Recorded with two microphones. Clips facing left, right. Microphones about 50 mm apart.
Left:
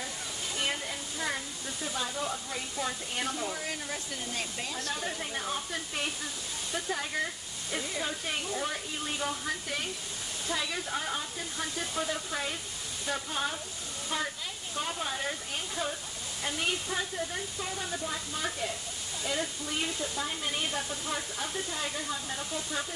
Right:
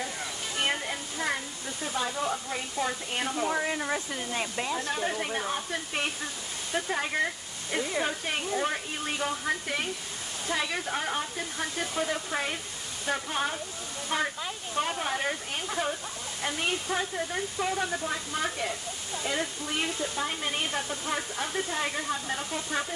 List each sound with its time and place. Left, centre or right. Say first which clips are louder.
0.6 s waterfall: right 4 dB; right
2.0 s speech: right 5 dB; right
16.9 s speech: right 3 dB; right
19.2 s speech: right 2 dB; right